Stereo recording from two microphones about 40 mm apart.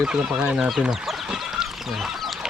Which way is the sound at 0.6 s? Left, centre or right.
Centre.